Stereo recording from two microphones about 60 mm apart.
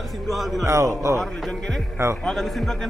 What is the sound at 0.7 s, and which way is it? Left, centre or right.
Speech, right.